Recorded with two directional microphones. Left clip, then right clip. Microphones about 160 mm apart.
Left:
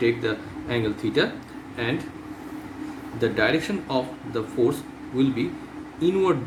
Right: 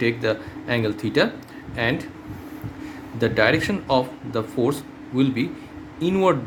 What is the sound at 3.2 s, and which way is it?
A man's voice, 65° right (ahead or behind).